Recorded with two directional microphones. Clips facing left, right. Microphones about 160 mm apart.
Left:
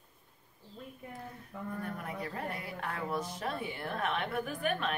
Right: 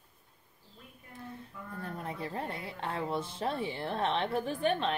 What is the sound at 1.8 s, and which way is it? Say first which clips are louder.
Speech: right 4 dB; 25° right (ahead or behind).